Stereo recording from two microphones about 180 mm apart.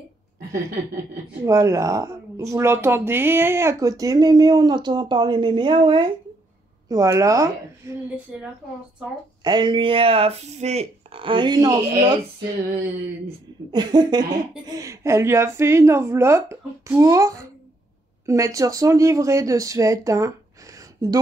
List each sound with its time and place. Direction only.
1.4 s a woman's voice: 15° right (ahead or behind)
8.3 s a woman's voice: 5° right (ahead or behind)
9.4 s speech: 25° right (ahead or behind)
13.7 s a woman's voice: 25° right (ahead or behind)